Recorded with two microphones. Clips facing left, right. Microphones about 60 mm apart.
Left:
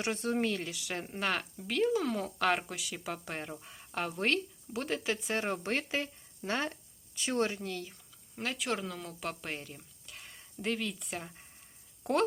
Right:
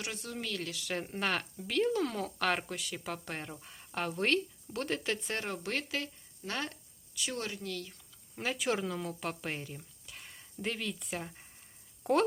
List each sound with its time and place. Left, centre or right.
0.0 s speech: left
0.6 s speech: centre
5.4 s speech: left
8.4 s speech: centre